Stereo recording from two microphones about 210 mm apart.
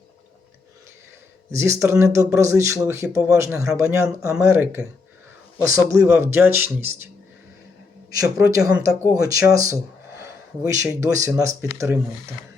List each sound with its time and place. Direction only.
1.5 s speech: 15° right (ahead or behind)
8.4 s speech: 15° right (ahead or behind)